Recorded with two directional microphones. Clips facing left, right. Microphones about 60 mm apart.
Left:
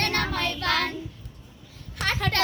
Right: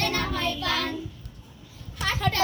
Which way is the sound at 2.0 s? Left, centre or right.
Left.